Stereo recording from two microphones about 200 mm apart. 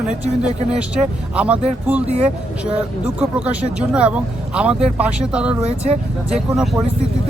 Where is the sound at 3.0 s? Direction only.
5° right (ahead or behind).